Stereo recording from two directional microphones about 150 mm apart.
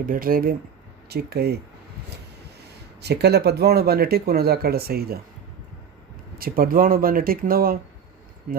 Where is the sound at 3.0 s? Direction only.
90° right.